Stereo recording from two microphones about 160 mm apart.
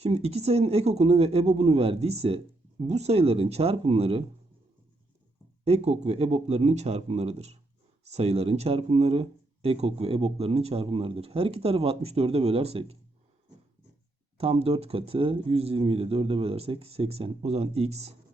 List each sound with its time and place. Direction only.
0.0 s speech: 40° right (ahead or behind)
5.6 s speech: 40° right (ahead or behind)
14.3 s speech: 35° right (ahead or behind)